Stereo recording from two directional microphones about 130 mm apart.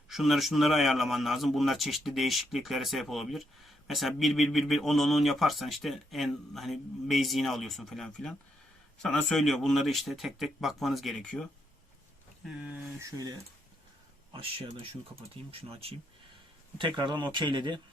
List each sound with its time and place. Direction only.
0.1 s speech: centre (ahead or behind)
12.5 s speech: 10° right (ahead or behind)
13.0 s speech: 25° right (ahead or behind)
15.7 s speech: 50° right (ahead or behind)
16.7 s speech: 35° right (ahead or behind)